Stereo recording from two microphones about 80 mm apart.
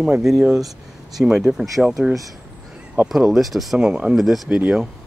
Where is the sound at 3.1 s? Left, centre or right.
Centre.